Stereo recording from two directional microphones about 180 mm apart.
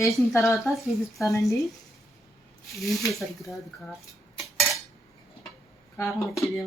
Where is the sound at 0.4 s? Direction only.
Centre (ahead or behind).